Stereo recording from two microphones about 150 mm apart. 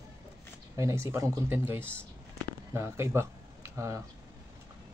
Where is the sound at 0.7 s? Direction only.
20° right (ahead or behind).